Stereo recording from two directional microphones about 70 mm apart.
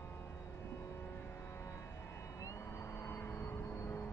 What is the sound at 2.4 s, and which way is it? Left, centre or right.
Cat, left.